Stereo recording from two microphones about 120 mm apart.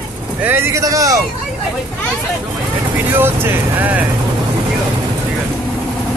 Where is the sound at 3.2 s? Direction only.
20° right (ahead or behind).